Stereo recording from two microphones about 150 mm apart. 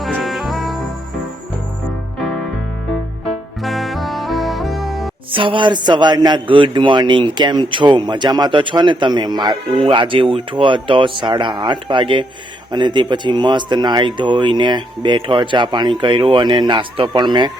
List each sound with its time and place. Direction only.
0.0 s music: centre (ahead or behind)
2.1 s music: centre (ahead or behind)
3.6 s music: centre (ahead or behind)
5.3 s a man's voice: 35° right (ahead or behind)